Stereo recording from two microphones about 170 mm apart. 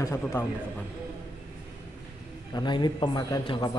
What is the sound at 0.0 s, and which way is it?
Speech, 15° left (ahead or behind).